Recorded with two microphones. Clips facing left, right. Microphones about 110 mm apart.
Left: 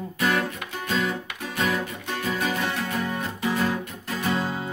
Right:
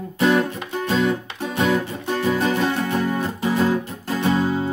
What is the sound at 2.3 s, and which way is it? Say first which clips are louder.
Music: right 6 dB; 30° right (ahead or behind).